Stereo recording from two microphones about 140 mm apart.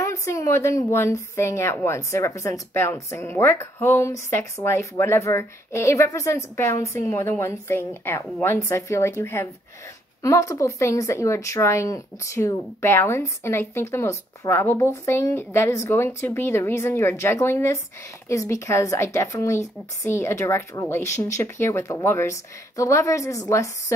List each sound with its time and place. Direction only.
0.0 s a woman's voice: 20° left (ahead or behind)